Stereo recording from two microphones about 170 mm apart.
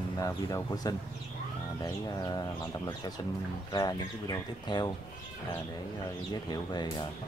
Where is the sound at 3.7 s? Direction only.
25° left (ahead or behind).